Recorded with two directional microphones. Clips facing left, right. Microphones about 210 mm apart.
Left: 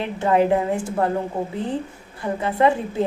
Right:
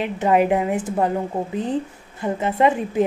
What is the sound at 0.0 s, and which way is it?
A woman's voice, 15° right (ahead or behind).